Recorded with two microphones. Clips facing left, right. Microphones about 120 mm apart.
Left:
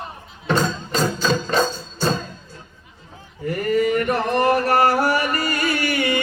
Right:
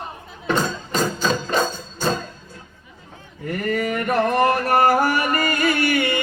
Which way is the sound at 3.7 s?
45° right (ahead or behind).